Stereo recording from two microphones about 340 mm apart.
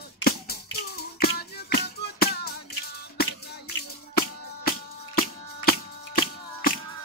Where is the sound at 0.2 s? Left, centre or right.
Left.